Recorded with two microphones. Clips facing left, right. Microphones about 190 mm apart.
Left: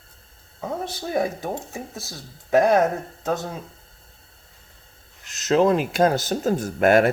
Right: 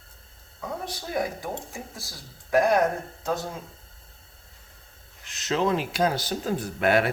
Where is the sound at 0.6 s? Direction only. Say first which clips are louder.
Left 5 dB; 25° left (ahead or behind).